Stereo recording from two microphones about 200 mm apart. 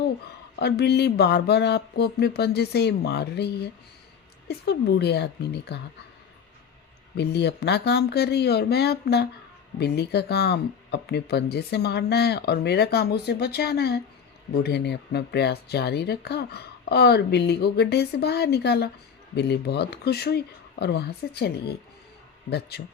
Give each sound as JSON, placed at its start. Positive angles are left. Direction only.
{"t": 0.6, "sound": "speech", "side_deg": 55}
{"t": 7.2, "sound": "speech", "side_deg": 55}